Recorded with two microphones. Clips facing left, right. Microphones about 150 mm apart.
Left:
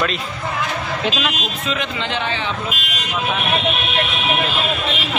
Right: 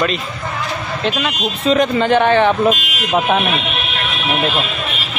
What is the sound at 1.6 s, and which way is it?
Speech, 40° right (ahead or behind).